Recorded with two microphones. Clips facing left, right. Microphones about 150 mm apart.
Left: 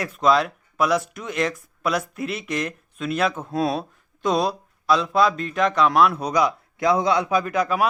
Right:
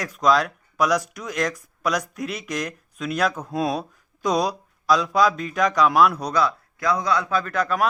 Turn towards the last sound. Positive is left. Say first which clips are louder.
# left 1 dB
turn(degrees=10)  # may be behind; listen again after turning